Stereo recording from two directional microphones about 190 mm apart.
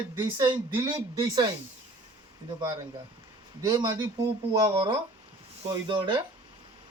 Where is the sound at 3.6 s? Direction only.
20° right (ahead or behind).